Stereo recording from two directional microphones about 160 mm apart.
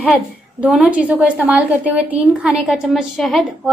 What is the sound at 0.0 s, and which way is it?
A woman's voice, 5° right (ahead or behind).